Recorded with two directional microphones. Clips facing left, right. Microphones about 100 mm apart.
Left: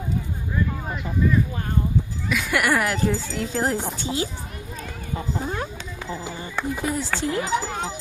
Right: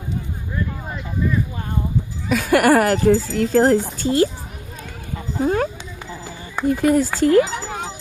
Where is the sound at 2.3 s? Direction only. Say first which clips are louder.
Right 8 dB; 45° right (ahead or behind).